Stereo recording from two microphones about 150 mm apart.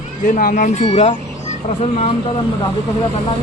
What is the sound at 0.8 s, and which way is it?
Speech, 40° left (ahead or behind).